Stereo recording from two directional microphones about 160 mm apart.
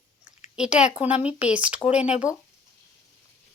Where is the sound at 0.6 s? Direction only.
5° right (ahead or behind).